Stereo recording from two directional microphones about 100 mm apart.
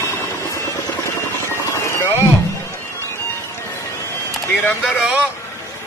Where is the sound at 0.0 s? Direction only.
25° left (ahead or behind).